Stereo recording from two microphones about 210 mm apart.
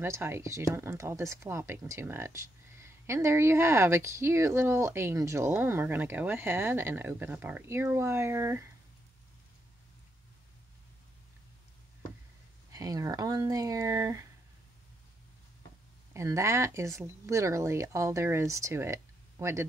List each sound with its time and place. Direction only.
0.0 s speech: 10° right (ahead or behind)
12.7 s speech: 15° right (ahead or behind)
16.1 s speech: 15° right (ahead or behind)